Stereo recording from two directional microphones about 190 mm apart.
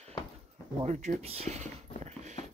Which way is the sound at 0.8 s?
40° right (ahead or behind).